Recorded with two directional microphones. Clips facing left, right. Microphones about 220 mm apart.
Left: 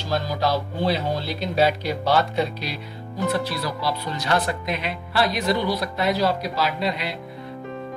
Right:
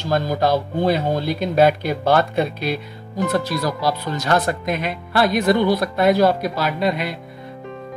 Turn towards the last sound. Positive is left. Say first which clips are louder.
# right 4 dB
turn(degrees=-50)  # may be behind; listen again after turning